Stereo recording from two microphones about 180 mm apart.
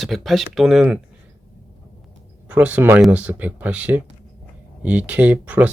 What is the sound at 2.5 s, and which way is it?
Speech, 5° right (ahead or behind).